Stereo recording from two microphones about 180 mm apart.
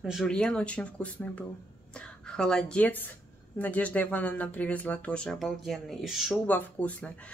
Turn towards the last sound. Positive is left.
turn(degrees=10)  # may be behind; listen again after turning